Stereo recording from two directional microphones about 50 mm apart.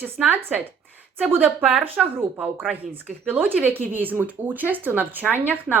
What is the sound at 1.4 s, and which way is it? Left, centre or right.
Speech, right.